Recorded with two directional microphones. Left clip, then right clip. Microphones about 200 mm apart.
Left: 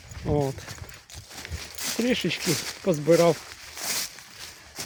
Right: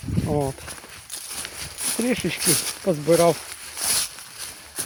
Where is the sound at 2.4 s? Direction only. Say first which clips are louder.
Right 4 dB; 35° right (ahead or behind).